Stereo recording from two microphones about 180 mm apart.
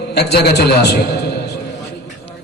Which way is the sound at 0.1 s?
65° left (ahead or behind).